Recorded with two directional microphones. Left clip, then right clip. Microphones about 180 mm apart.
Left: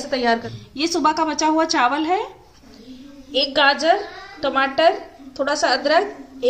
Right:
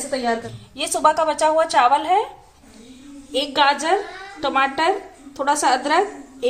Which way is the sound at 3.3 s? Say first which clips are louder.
Left 1 dB; 30° right (ahead or behind).